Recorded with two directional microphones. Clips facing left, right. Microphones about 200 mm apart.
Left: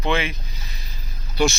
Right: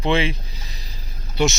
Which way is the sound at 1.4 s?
25° right (ahead or behind).